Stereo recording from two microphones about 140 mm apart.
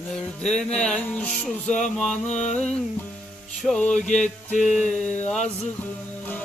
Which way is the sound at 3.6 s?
5° left (ahead or behind).